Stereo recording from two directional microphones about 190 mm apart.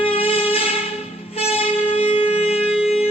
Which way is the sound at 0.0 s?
30° left (ahead or behind).